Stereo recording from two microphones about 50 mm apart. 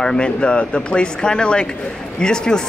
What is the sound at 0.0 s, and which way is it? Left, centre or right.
Speech, centre.